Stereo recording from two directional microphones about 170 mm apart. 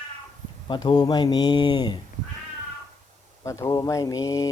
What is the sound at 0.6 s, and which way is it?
Speech, 25° left (ahead or behind).